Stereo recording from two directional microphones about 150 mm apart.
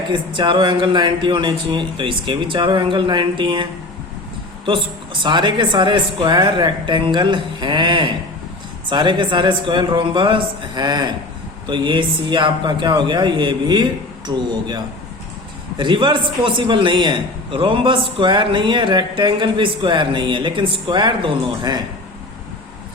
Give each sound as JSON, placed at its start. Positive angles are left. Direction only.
{"t": 0.1, "sound": "a man's voice", "side_deg": -30}
{"t": 5.2, "sound": "a man's voice", "side_deg": -30}
{"t": 15.8, "sound": "a man's voice", "side_deg": -35}